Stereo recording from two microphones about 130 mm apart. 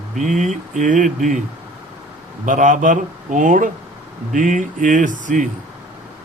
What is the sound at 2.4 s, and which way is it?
Speech, 80° right.